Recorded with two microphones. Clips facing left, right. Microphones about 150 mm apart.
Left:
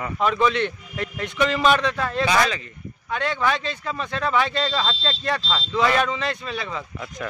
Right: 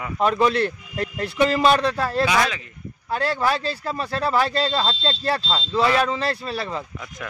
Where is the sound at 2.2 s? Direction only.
5° right (ahead or behind).